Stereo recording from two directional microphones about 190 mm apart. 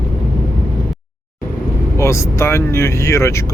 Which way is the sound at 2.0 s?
15° left (ahead or behind).